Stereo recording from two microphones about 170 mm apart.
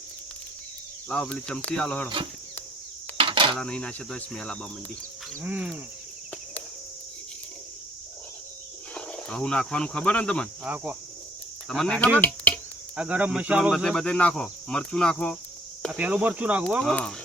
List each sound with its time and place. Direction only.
1.0 s speech: 5° left (ahead or behind)
3.2 s dishes: 30° right (ahead or behind)
3.6 s speech: 5° left (ahead or behind)
5.4 s speech: 10° right (ahead or behind)
9.0 s speech: 5° left (ahead or behind)
11.7 s speech: 5° left (ahead or behind)
13.0 s speech: 10° right (ahead or behind)
15.9 s speech: 5° right (ahead or behind)
16.8 s speech: 5° left (ahead or behind)